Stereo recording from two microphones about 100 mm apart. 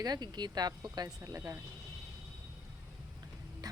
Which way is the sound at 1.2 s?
30° right (ahead or behind).